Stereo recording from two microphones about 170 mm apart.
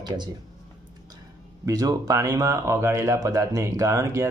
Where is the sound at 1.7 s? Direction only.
20° right (ahead or behind).